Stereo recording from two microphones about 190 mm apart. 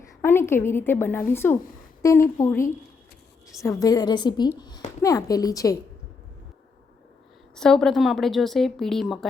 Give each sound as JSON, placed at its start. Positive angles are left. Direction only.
{"t": 0.2, "sound": "a woman's voice", "side_deg": 10}
{"t": 7.5, "sound": "a woman's voice", "side_deg": 5}